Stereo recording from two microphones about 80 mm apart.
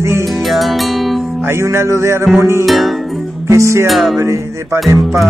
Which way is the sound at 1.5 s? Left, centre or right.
Right.